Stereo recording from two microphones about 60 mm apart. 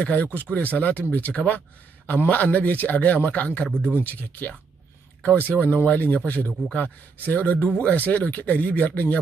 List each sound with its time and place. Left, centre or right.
0.0 s a man's voice: left
3.7 s speech: right
4.0 s a man's voice: left